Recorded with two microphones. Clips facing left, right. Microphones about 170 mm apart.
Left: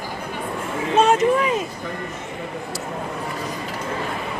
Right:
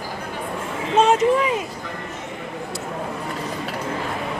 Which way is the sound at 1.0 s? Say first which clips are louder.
Even; 20° right (ahead or behind).